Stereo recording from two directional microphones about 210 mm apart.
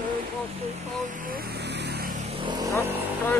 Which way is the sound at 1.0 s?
40° right (ahead or behind).